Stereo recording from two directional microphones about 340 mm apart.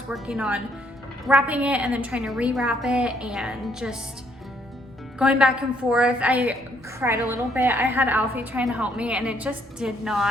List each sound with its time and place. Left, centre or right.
0.1 s a woman's voice: centre
5.2 s a woman's voice: centre